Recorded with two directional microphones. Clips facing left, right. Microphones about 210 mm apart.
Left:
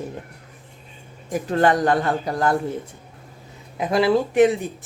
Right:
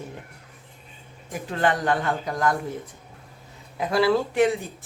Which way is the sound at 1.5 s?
40° left (ahead or behind).